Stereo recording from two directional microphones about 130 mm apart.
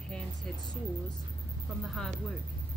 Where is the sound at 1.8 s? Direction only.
Centre (ahead or behind).